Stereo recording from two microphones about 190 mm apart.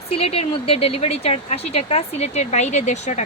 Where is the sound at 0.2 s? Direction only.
30° left (ahead or behind).